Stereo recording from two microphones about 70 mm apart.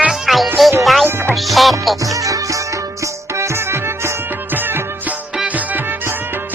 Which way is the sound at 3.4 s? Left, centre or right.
Right.